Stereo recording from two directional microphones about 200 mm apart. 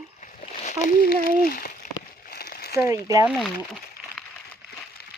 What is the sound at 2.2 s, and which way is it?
Crumpling, 50° left (ahead or behind).